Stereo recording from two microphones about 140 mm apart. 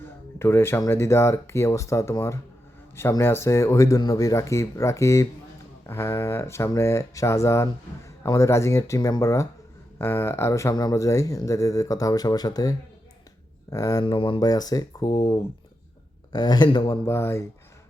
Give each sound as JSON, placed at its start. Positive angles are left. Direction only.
{"t": 0.0, "sound": "speech", "side_deg": 15}
{"t": 14.0, "sound": "speech", "side_deg": 35}
{"t": 17.1, "sound": "speech", "side_deg": 20}